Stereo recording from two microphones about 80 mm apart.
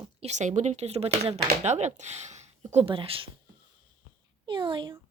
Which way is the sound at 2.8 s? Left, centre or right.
Right.